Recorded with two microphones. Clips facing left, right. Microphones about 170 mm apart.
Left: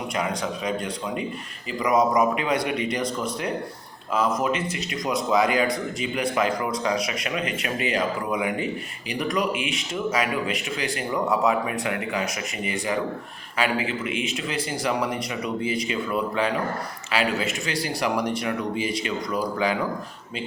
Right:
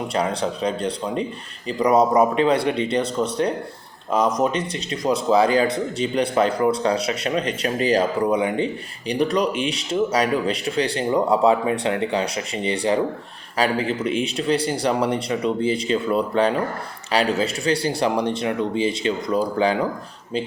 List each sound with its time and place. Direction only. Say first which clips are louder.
0.1 s speech: right 4 dB; 30° right (ahead or behind)